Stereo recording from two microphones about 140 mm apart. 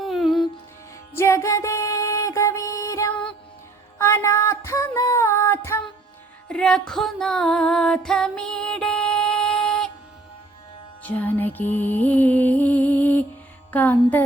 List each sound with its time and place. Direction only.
0.0 s music: centre (ahead or behind)
1.1 s music: 20° left (ahead or behind)
3.1 s music: 10° left (ahead or behind)
3.9 s music: 20° left (ahead or behind)
6.5 s music: 5° left (ahead or behind)
11.0 s music: 10° left (ahead or behind)